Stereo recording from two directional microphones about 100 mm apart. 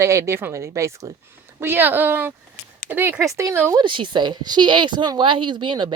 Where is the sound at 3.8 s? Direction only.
55° right (ahead or behind).